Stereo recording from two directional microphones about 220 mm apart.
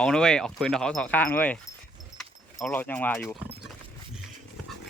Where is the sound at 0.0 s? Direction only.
5° left (ahead or behind).